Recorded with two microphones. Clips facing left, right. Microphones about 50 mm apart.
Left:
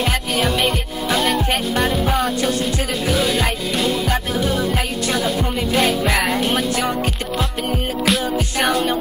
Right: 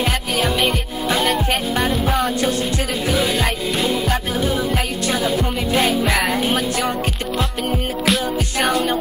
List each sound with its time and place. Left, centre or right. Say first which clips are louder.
0.0 s music: even; centre
8.0 s music: left 1 dB; centre